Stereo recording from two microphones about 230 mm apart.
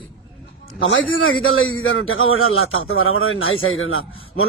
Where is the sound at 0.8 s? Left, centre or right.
Left.